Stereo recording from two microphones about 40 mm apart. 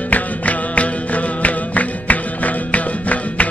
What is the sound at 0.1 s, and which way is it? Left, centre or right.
Music, left.